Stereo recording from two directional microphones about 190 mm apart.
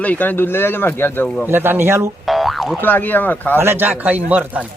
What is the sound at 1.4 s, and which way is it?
Speech, 10° right (ahead or behind).